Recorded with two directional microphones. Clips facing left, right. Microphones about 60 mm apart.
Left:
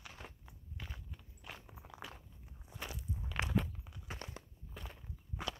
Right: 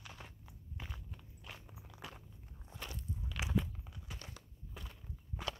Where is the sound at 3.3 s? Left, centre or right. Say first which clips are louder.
Left 5 dB; left.